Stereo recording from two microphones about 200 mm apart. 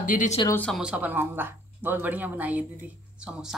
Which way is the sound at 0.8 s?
5° right (ahead or behind).